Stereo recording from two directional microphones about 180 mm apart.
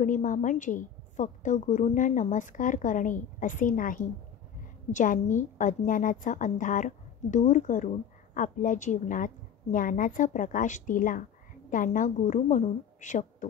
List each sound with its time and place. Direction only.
0.0 s a woman's voice: 45° left (ahead or behind)